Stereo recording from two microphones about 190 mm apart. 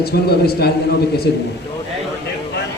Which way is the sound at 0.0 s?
55° left (ahead or behind).